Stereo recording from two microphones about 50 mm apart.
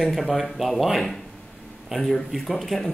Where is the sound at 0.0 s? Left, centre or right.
Centre.